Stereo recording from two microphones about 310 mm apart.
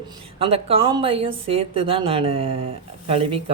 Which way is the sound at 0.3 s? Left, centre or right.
Centre.